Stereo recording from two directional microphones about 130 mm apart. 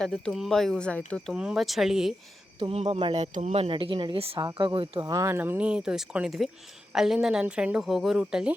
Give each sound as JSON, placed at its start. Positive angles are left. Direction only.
{"t": 0.0, "sound": "speech", "side_deg": 5}
{"t": 1.3, "sound": "speech", "side_deg": -5}
{"t": 2.6, "sound": "speech", "side_deg": -50}
{"t": 4.4, "sound": "speech", "side_deg": -35}